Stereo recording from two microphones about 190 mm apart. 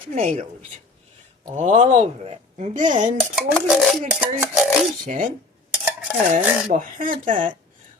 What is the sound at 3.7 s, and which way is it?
Speech, centre (ahead or behind).